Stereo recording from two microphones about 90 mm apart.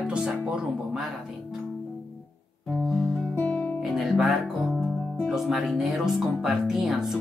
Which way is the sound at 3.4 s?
15° left (ahead or behind).